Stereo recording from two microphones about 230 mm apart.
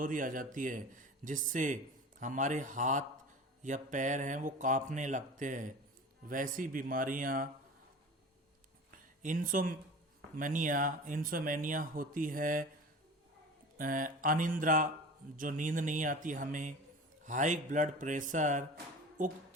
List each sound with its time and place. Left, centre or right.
0.0 s speech: right
9.2 s speech: right
13.7 s speech: right